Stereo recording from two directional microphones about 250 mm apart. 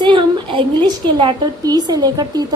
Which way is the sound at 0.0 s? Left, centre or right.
Centre.